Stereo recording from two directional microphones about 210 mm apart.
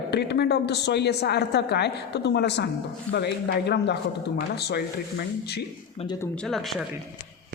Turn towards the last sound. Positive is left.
turn(degrees=0)  # may be behind; listen again after turning